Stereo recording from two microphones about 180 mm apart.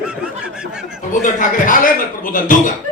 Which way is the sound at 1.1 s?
45° left (ahead or behind).